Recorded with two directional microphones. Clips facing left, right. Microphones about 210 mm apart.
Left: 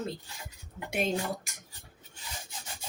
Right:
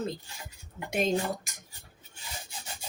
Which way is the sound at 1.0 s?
10° left (ahead or behind).